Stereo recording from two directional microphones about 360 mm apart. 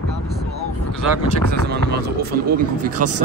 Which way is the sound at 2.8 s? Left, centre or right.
Right.